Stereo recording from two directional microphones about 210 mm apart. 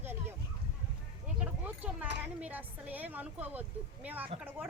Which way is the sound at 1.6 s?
5° right (ahead or behind).